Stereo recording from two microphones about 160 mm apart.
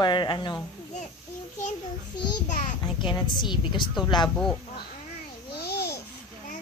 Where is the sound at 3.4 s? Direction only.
30° left (ahead or behind).